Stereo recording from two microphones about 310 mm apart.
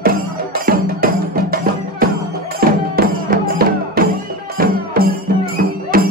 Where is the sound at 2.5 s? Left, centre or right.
Right.